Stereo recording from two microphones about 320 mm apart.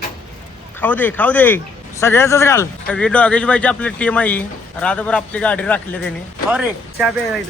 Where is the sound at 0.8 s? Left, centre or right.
Centre.